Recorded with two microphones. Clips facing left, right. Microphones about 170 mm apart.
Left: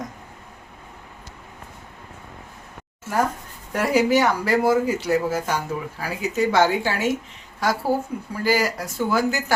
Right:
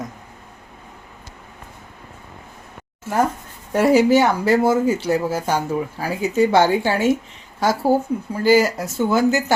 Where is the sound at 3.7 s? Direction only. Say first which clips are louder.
Right 5 dB; 25° right (ahead or behind).